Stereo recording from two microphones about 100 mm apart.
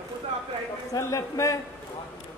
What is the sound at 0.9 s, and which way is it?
Speech, 35° left (ahead or behind).